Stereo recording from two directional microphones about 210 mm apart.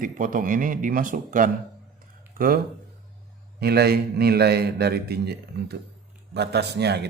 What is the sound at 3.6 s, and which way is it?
A man's voice, 50° right (ahead or behind).